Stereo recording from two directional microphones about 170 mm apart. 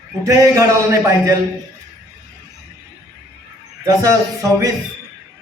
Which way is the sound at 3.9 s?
20° right (ahead or behind).